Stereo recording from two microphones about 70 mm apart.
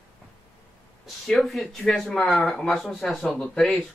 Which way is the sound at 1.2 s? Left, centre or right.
Centre.